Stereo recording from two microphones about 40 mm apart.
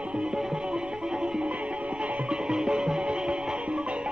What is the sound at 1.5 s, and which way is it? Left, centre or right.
Music, right.